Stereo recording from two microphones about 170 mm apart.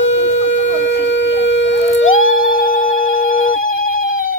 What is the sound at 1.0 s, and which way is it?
Shofar, 90° left.